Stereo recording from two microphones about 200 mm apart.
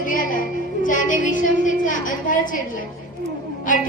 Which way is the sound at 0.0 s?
45° left (ahead or behind).